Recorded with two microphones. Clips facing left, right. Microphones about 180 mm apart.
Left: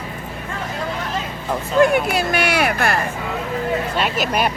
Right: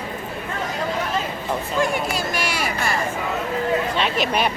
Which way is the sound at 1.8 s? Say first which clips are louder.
Left 9 dB; 60° left (ahead or behind).